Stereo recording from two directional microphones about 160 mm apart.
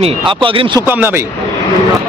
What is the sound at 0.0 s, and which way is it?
Speech, 30° right (ahead or behind).